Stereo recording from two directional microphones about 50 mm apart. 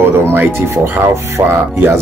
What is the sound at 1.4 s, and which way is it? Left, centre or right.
Speech, right.